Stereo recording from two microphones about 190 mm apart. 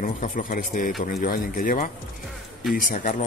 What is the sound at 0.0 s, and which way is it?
A man's voice, 45° left (ahead or behind).